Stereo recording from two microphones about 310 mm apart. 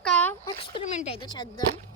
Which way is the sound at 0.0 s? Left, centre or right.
Centre.